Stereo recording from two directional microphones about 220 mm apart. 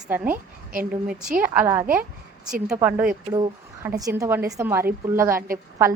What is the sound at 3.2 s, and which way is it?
A woman's voice, 20° right (ahead or behind).